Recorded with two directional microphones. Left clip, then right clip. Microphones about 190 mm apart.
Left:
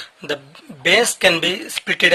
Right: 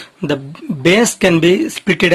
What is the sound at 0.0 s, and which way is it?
Speech, 15° right (ahead or behind).